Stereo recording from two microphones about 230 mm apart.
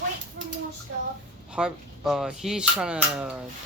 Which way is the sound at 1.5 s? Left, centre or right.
Centre.